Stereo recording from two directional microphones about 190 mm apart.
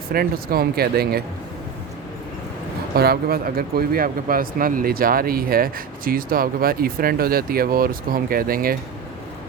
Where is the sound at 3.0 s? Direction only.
55° right (ahead or behind).